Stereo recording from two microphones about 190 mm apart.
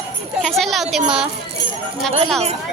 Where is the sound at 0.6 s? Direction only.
Centre (ahead or behind).